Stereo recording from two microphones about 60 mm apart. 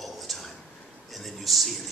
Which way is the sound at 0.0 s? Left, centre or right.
Centre.